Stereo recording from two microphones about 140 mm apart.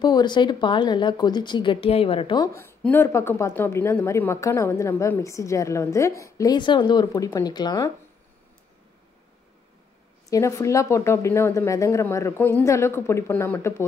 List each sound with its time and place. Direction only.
0.0 s a woman's voice: 30° left (ahead or behind)
2.3 s a woman's voice: 20° left (ahead or behind)
10.3 s a woman's voice: 20° left (ahead or behind)